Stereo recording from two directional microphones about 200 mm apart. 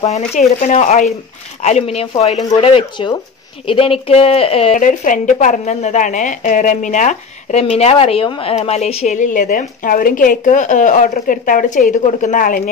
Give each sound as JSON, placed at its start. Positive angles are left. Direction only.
{"t": 0.0, "sound": "speech", "side_deg": 35}
{"t": 4.8, "sound": "speech", "side_deg": 40}